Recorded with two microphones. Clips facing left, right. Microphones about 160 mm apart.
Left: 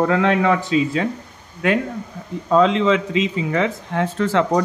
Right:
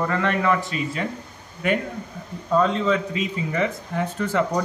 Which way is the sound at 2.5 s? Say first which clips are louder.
Left 5 dB; 90° left.